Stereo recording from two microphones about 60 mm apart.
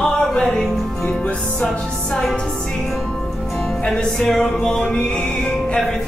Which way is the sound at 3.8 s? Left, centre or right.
Centre.